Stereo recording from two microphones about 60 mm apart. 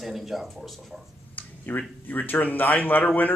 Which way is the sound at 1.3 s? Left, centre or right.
Left.